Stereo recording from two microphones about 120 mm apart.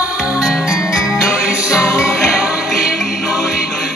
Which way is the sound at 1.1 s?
25° left (ahead or behind).